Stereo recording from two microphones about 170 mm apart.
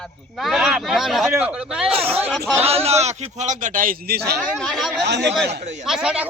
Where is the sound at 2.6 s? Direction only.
35° right (ahead or behind); by 4.3 s 65° right (ahead or behind).